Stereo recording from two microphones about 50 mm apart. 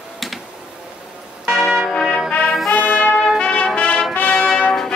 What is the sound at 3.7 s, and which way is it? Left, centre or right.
Music, left.